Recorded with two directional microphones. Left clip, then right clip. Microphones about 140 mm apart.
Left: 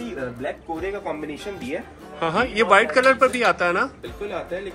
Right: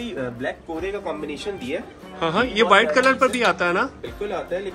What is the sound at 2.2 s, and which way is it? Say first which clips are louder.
A man's voice: right 1 dB; 15° right (ahead or behind).